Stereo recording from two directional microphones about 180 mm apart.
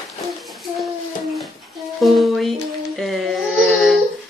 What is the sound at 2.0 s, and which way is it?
Speech, centre (ahead or behind).